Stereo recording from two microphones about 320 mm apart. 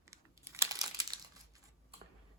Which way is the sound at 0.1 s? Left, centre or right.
Centre.